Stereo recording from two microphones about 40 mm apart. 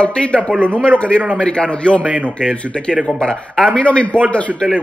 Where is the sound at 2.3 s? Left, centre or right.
Left.